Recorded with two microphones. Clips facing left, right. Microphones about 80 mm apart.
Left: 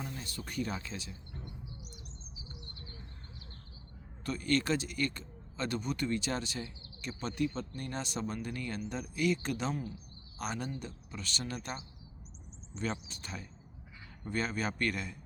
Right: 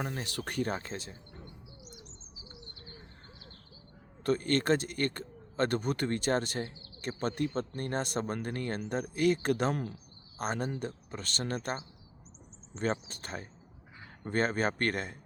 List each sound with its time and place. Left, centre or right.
0.0 s speech: right
0.7 s speech: right
4.2 s speech: right